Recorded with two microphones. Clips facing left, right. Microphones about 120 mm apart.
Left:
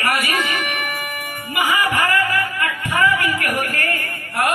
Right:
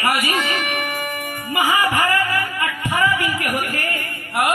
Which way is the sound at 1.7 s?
20° right (ahead or behind).